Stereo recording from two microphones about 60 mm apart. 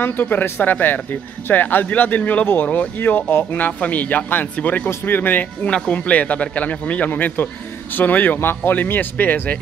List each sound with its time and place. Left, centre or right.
0.0 s a man's voice: left
5.7 s a man's voice: centre